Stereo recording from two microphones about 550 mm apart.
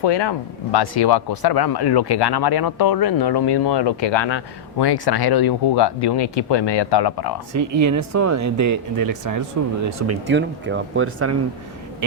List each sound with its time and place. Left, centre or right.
0.0 s speech: left
7.5 s speech: right
10.1 s speech: centre